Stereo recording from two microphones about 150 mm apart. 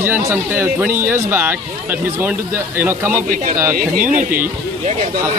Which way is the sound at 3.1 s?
65° right (ahead or behind).